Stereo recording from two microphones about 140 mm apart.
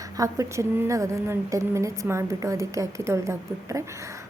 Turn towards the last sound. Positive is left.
turn(degrees=-20)  # may be behind; listen again after turning